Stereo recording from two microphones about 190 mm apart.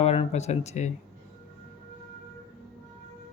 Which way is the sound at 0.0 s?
30° left (ahead or behind).